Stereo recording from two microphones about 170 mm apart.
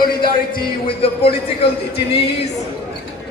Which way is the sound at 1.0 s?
35° left (ahead or behind).